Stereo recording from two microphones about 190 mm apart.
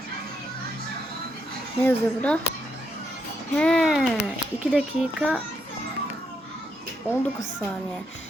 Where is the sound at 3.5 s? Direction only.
5° left (ahead or behind).